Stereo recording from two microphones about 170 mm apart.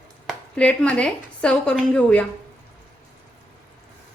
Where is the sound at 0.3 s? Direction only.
5° left (ahead or behind).